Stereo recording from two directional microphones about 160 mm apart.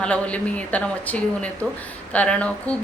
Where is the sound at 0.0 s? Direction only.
5° left (ahead or behind).